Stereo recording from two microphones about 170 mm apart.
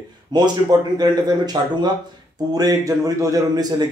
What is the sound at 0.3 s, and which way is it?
A man's voice, 25° right (ahead or behind).